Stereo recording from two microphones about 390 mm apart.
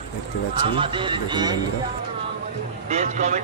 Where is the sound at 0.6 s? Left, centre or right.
Centre.